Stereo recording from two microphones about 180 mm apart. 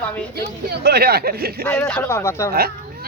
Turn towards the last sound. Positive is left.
turn(degrees=-60)  # may be behind; listen again after turning